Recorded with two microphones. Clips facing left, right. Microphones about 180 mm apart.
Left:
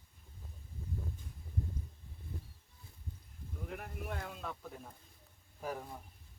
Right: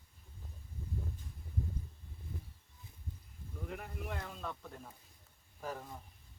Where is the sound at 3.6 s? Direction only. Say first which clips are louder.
Even; centre (ahead or behind).